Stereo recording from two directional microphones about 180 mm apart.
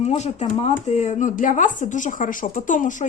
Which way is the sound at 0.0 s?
40° left (ahead or behind).